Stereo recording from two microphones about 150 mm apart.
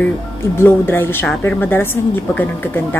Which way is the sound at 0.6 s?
15° left (ahead or behind).